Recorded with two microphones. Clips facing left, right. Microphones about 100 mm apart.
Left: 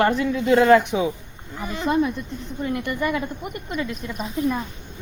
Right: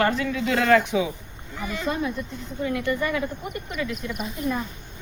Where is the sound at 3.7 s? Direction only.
35° left (ahead or behind).